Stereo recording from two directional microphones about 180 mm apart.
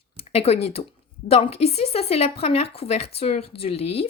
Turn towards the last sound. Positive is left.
turn(degrees=35)  # may be behind; listen again after turning